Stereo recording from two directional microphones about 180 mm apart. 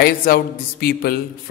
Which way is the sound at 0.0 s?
60° left (ahead or behind).